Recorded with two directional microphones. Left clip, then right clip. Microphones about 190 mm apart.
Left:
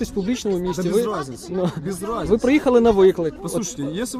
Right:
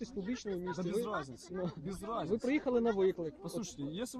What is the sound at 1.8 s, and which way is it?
Speech, 10° left (ahead or behind).